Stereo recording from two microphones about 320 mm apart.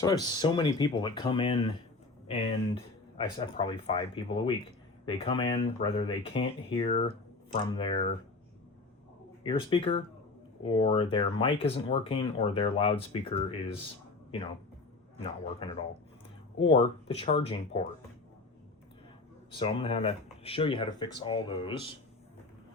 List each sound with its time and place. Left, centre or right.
0.0 s speech: centre
9.4 s speech: centre
15.6 s speech: centre
17.2 s speech: centre
19.5 s speech: centre